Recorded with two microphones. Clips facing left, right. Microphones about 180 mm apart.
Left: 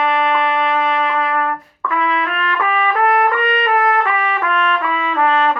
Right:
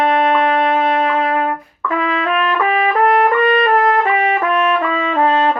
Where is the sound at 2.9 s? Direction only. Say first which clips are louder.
Right 2 dB; 25° right (ahead or behind).